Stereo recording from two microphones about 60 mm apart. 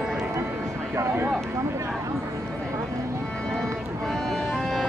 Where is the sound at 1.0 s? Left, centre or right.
Right.